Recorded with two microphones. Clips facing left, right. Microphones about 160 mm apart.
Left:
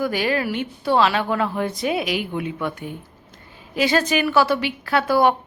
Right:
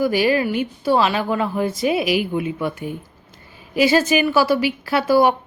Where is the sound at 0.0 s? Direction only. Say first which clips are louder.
Right 4 dB; 5° right (ahead or behind).